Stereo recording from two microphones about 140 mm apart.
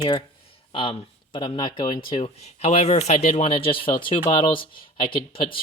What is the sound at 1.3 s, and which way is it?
Speech, 35° left (ahead or behind).